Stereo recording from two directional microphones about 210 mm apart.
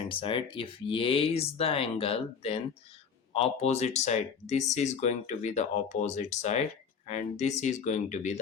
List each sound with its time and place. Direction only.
0.1 s speech: 25° left (ahead or behind)